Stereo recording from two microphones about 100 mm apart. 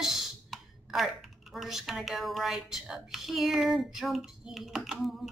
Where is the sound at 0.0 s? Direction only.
Centre (ahead or behind).